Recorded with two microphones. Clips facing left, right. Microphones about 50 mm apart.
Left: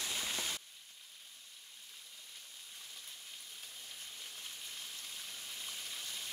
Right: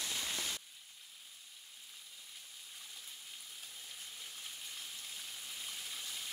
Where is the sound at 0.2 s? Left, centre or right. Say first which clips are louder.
Left 1 dB; centre.